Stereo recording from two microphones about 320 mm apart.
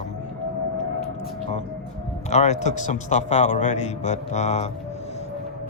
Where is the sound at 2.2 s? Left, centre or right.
Left.